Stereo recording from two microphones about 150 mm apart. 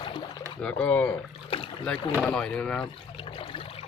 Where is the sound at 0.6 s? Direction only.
10° left (ahead or behind).